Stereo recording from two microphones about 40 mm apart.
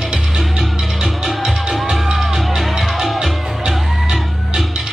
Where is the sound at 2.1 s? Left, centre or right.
Centre.